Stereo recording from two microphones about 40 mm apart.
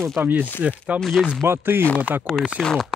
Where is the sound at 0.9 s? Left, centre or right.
Right.